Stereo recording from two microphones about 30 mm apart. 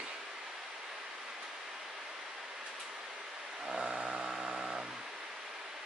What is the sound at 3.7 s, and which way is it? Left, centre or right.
Vehicle, right.